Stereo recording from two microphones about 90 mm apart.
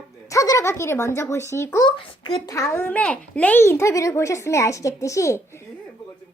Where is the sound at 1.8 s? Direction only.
45° left (ahead or behind); by 3.6 s 15° left (ahead or behind).